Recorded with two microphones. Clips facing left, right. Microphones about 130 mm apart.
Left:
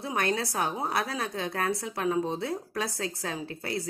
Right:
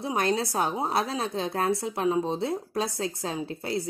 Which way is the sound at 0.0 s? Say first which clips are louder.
Right 3 dB; 25° right (ahead or behind).